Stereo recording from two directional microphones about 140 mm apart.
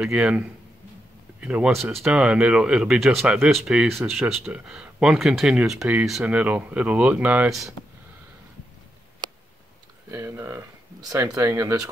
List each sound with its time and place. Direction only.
0.0 s speech: 5° right (ahead or behind)
10.1 s speech: 20° right (ahead or behind)